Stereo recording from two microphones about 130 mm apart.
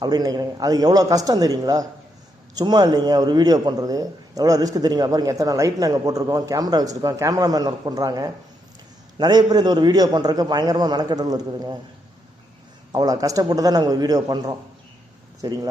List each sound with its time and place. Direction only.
0.0 s a man's voice: 30° right (ahead or behind)
12.9 s a man's voice: 30° right (ahead or behind)